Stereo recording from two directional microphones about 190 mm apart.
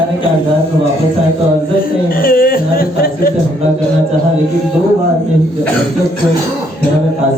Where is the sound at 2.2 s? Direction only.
50° left (ahead or behind).